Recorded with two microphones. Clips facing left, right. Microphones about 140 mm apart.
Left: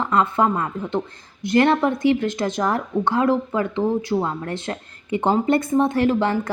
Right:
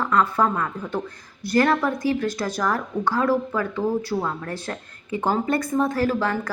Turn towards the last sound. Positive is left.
turn(degrees=25)  # may be behind; listen again after turning